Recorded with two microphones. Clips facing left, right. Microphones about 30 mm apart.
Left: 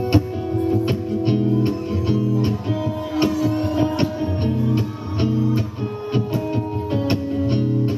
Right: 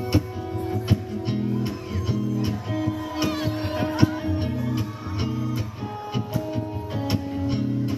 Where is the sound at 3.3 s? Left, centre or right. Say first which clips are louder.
Left 6 dB; right.